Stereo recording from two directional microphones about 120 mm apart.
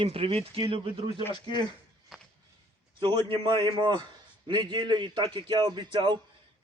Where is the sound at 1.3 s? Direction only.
40° left (ahead or behind).